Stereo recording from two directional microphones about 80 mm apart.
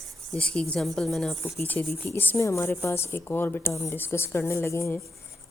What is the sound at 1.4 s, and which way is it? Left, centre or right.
Speech, left.